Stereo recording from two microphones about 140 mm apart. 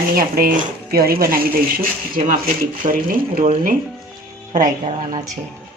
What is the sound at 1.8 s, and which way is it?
Speech, 80° right.